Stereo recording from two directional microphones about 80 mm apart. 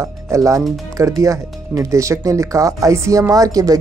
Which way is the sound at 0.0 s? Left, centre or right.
Right.